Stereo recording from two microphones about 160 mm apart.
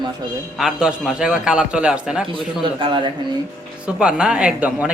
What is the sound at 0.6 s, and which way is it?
Speech, 5° right (ahead or behind).